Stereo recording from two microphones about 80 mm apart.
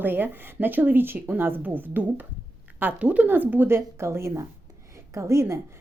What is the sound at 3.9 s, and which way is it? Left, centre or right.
Speech, right.